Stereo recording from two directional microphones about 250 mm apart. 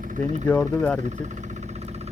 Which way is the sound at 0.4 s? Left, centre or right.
Centre.